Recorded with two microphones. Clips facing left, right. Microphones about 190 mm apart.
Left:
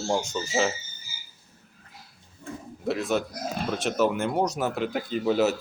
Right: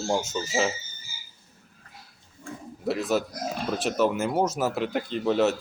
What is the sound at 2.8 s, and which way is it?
Speech, centre (ahead or behind).